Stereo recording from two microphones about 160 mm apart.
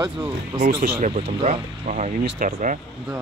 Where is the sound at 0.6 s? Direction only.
70° right (ahead or behind).